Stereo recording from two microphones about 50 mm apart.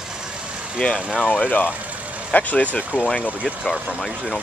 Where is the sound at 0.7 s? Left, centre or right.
Centre.